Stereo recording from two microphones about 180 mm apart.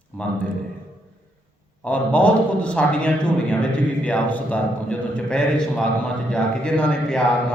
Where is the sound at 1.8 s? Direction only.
10° left (ahead or behind).